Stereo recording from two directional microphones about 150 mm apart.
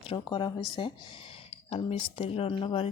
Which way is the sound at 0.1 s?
30° left (ahead or behind).